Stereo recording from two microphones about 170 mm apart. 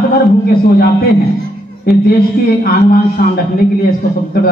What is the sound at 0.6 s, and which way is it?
A man's voice, 60° left (ahead or behind).